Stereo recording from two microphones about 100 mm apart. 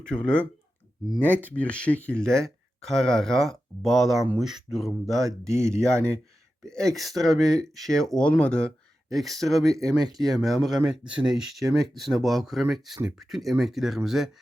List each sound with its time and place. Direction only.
0.0 s speech: 10° left (ahead or behind)
5.5 s speech: 30° right (ahead or behind)
6.7 s speech: 5° left (ahead or behind); by 11.3 s 10° right (ahead or behind)
11.6 s speech: centre (ahead or behind)